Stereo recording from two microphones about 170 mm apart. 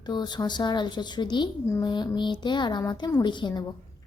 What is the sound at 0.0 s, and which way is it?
A woman's voice, 25° left (ahead or behind).